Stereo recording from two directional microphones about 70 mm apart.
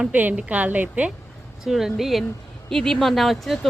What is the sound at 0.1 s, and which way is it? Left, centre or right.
A woman's voice, right.